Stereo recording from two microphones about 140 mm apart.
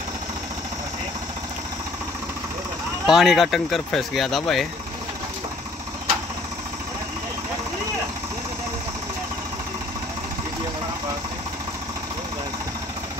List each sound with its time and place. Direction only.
3.1 s speech: centre (ahead or behind)